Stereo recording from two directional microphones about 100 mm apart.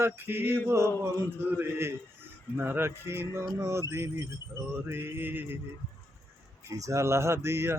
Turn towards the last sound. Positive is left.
turn(degrees=-25)  # may be behind; listen again after turning